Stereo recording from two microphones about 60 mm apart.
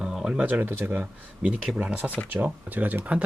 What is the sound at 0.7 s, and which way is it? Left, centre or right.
Speech, right.